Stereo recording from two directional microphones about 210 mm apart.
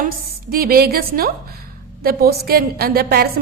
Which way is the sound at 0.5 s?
45° right (ahead or behind).